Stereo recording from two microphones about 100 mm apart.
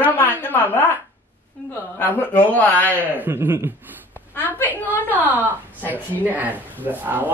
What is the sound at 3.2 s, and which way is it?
Speech, 25° right (ahead or behind).